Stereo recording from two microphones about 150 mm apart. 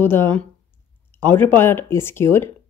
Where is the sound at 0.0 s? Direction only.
15° left (ahead or behind).